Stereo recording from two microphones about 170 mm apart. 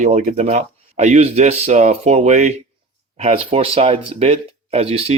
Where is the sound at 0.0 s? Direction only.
45° right (ahead or behind).